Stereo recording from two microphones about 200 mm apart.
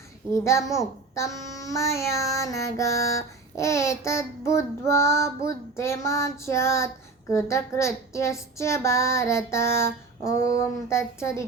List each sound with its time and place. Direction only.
0.3 s child singing: 15° left (ahead or behind)
10.3 s a sound: 55° right (ahead or behind)
10.8 s child singing: 15° left (ahead or behind)